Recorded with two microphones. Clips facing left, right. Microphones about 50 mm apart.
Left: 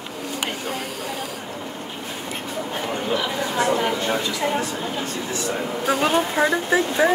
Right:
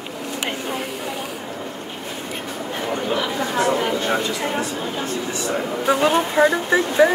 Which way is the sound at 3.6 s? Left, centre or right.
Centre.